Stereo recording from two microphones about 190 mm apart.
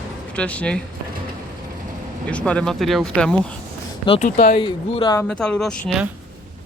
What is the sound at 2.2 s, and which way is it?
Speech, 5° left (ahead or behind).